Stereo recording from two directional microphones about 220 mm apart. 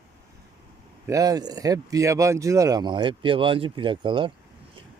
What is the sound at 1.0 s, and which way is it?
Speech, 15° right (ahead or behind).